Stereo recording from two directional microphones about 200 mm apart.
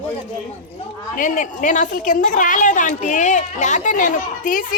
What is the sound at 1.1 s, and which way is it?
A woman's voice, 40° left (ahead or behind).